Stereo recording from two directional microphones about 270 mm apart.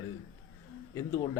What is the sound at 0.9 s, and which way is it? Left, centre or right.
Speech, centre.